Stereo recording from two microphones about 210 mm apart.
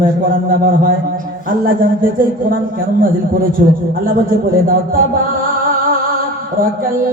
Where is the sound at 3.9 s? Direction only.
45° right (ahead or behind).